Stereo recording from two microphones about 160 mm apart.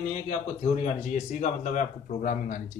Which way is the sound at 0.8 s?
50° left (ahead or behind).